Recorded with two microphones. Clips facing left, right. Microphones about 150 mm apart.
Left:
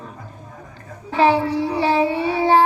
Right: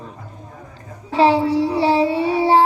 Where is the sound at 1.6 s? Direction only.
15° left (ahead or behind).